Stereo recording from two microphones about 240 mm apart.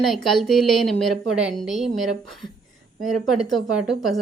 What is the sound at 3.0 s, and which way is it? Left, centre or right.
A woman's voice, centre.